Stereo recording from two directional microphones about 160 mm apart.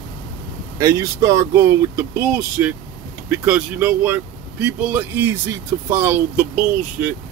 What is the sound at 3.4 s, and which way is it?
Speech, 5° right (ahead or behind).